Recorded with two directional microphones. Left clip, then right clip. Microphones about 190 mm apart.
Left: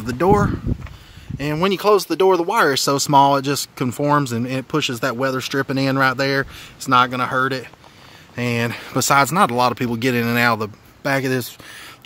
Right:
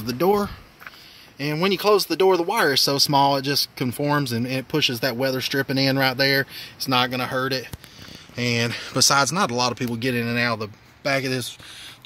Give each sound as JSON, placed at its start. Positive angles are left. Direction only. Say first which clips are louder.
{"t": 0.0, "sound": "speech", "louder": "left 4 dB", "side_deg": 5}